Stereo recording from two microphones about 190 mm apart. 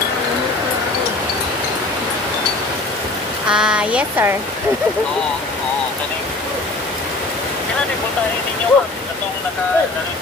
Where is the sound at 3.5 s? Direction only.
5° right (ahead or behind).